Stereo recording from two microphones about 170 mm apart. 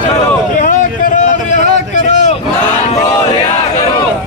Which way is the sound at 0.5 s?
50° left (ahead or behind).